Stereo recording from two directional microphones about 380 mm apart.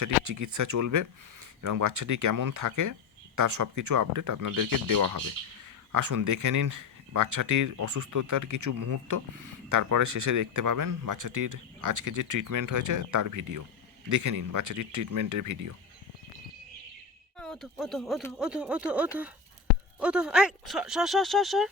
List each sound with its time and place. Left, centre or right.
0.0 s speech: right
17.3 s speech: centre